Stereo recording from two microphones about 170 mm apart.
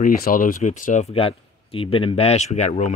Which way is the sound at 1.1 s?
35° left (ahead or behind).